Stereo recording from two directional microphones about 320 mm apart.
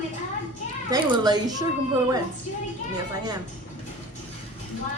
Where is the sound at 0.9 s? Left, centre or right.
Centre.